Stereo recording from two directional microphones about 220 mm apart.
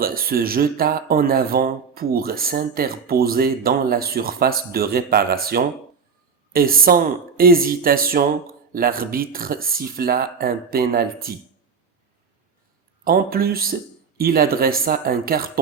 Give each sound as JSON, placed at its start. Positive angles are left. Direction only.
{"t": 0.0, "sound": "speech", "side_deg": -40}
{"t": 13.1, "sound": "speech", "side_deg": -40}